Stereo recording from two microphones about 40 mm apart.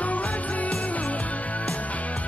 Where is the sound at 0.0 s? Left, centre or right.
Left.